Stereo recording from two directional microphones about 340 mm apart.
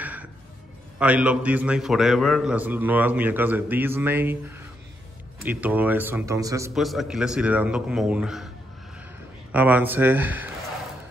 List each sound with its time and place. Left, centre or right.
0.0 s music: centre
0.9 s a man's voice: centre
9.5 s a man's voice: centre